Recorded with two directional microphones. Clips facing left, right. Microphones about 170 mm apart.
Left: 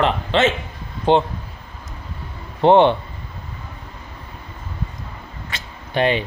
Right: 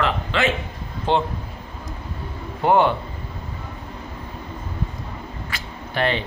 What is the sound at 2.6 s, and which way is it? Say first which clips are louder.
Speech: left 5 dB; 25° left (ahead or behind).